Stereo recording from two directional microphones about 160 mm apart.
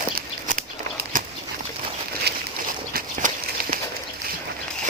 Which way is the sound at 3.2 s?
50° right (ahead or behind).